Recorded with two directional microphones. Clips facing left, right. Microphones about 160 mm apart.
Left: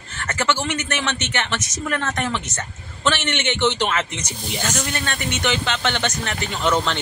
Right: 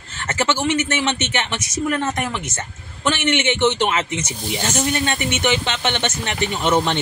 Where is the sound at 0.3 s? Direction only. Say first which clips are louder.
Right 3 dB; 20° right (ahead or behind).